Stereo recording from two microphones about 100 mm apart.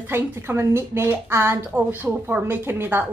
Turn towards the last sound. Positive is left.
turn(degrees=-20)  # may be behind; listen again after turning